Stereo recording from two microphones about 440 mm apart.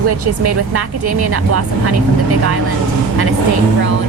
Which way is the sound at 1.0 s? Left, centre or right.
Right.